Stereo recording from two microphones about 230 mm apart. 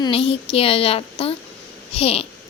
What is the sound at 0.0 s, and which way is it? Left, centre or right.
Speech, left.